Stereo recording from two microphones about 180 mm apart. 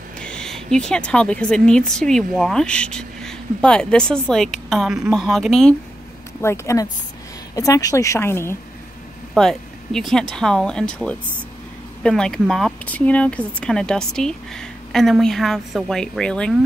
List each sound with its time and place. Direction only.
0.2 s speech: 5° left (ahead or behind)
6.4 s a woman's voice: 15° left (ahead or behind)
9.3 s speech: centre (ahead or behind)